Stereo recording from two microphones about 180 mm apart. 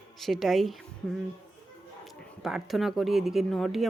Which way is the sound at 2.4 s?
Centre (ahead or behind).